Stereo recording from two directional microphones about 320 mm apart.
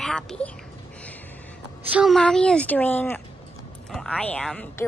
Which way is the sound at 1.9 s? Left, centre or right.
Centre.